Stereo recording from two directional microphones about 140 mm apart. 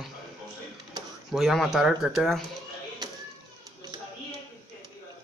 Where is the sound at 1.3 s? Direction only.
Centre (ahead or behind).